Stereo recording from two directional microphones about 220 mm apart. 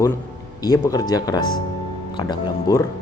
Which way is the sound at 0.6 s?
15° left (ahead or behind).